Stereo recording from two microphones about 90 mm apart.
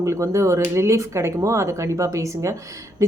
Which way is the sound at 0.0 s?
35° right (ahead or behind).